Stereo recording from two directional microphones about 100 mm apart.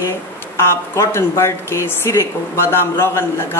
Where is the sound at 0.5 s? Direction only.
30° left (ahead or behind).